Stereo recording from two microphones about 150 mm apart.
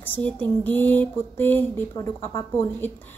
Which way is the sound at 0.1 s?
10° left (ahead or behind).